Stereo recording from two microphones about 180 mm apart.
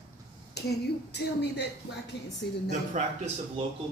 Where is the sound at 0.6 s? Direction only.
65° left (ahead or behind).